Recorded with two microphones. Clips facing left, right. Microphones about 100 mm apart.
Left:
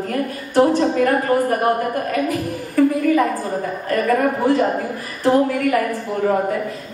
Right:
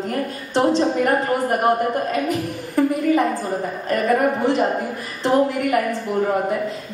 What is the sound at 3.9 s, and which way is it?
A woman's voice, 20° right (ahead or behind).